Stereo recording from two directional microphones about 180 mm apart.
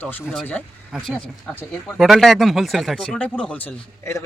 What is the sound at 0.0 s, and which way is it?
Speech, 10° left (ahead or behind).